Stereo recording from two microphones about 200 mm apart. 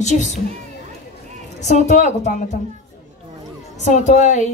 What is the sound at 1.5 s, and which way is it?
Speech, 35° left (ahead or behind).